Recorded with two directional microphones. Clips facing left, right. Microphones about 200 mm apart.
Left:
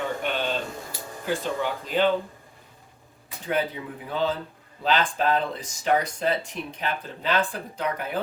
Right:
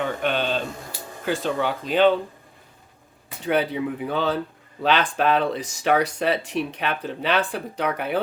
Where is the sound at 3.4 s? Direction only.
70° right (ahead or behind).